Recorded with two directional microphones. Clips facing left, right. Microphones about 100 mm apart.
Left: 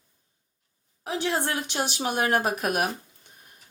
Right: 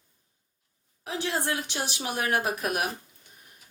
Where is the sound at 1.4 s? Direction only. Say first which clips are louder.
Left 2 dB; 25° left (ahead or behind).